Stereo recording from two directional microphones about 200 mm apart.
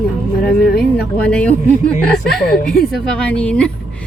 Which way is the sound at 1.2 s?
5° left (ahead or behind).